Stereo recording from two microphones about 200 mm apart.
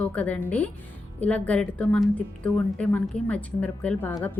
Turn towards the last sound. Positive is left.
turn(degrees=5)  # may be behind; listen again after turning